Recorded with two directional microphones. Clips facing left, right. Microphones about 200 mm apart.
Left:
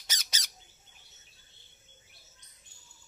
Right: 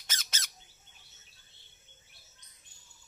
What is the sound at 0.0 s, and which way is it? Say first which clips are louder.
Squawk: even; 10° left (ahead or behind).